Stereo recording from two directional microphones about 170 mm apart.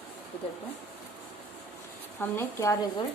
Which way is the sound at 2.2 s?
15° left (ahead or behind).